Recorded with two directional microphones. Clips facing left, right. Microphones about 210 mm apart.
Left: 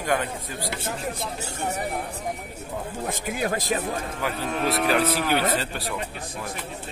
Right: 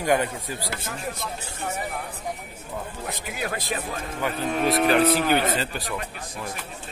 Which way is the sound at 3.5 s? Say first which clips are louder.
Left 4 dB; 45° left (ahead or behind).